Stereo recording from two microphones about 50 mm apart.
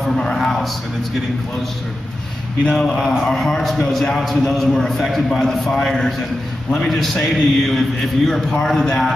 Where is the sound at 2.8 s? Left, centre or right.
Centre.